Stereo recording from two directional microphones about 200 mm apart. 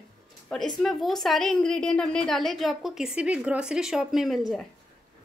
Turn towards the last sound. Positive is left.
turn(degrees=0)  # may be behind; listen again after turning